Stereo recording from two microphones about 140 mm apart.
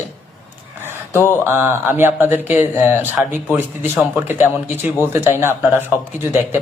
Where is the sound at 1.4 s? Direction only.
15° right (ahead or behind).